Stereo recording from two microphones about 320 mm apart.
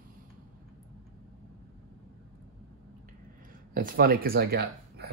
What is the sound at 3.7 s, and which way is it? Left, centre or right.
Speech, right.